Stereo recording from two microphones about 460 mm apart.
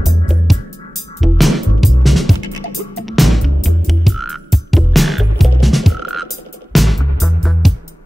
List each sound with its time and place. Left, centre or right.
0.0 s music: centre
3.0 s frog: centre
6.7 s music: centre